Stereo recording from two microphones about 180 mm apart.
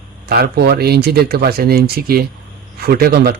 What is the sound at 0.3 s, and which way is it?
A man's voice, 60° right (ahead or behind).